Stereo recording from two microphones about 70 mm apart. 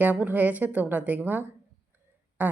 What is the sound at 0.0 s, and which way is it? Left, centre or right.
Speech, right.